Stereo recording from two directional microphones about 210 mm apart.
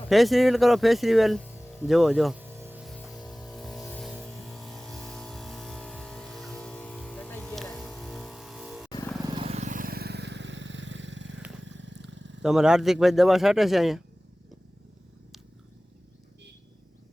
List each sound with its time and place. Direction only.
0.1 s music: centre (ahead or behind)
4.1 s a sound: centre (ahead or behind)
8.9 s vehicle: 15° left (ahead or behind)
9.2 s vehicle: 25° right (ahead or behind); by 11.4 s 60° right (ahead or behind)
11.6 s a sound: 60° right (ahead or behind)
12.4 s speech: 5° right (ahead or behind)